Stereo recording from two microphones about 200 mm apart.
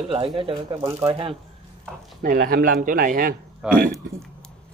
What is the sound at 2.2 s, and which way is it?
Speech, 45° right (ahead or behind).